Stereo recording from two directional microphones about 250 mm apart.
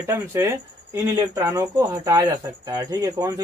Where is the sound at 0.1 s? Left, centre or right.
Centre.